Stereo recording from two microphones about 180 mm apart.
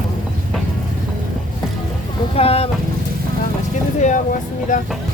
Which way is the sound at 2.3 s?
35° left (ahead or behind).